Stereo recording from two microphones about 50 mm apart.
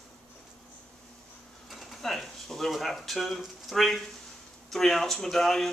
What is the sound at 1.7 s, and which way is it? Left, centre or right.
Speech, centre.